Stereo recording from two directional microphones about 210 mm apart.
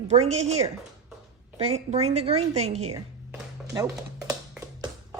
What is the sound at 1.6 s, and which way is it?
A woman's voice, 30° right (ahead or behind).